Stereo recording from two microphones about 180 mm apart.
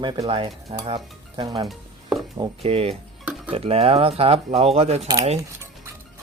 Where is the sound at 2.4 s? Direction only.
30° right (ahead or behind).